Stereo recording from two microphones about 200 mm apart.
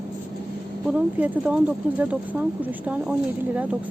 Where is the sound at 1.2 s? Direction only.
10° right (ahead or behind).